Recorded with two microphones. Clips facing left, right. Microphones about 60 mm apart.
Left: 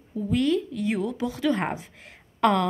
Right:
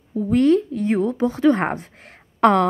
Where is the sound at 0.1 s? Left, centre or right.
Right.